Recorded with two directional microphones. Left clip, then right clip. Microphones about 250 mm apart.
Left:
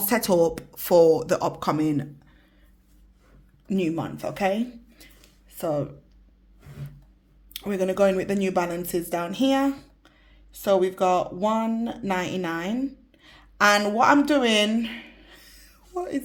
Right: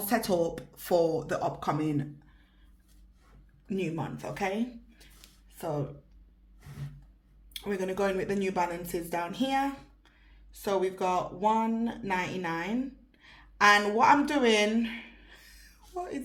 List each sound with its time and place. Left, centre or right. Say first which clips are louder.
0.0 s speech: left 7 dB; left
3.7 s speech: left 7 dB; left
5.5 s a sound: left 8 dB; left
7.5 s speech: left 7 dB; left
10.6 s a woman's voice: left 8 dB; left